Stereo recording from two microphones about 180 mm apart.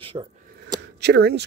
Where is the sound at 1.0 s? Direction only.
65° right (ahead or behind).